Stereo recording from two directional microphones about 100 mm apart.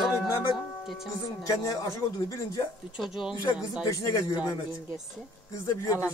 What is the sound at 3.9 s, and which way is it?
Speech, 35° left (ahead or behind).